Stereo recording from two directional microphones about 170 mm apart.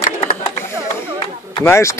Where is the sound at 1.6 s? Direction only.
15° left (ahead or behind).